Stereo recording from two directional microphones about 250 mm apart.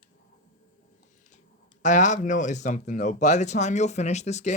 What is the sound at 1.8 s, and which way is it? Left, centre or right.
Speech, left.